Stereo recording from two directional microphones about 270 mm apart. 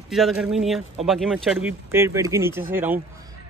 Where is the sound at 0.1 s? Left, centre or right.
Centre.